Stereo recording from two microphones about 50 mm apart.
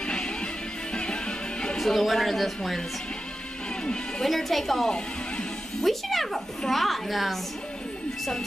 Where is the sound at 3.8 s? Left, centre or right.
Centre.